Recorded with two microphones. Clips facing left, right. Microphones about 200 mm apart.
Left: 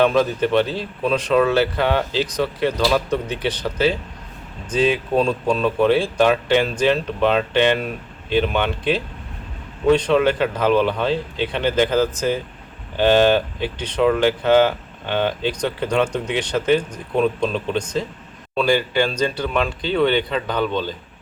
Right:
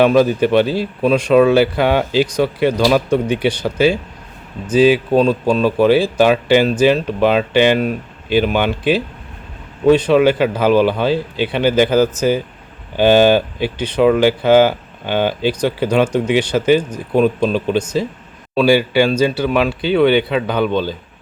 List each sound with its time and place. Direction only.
0.0 s speech: 10° right (ahead or behind)
5.1 s speech: 30° right (ahead or behind)
5.5 s speech: 5° right (ahead or behind)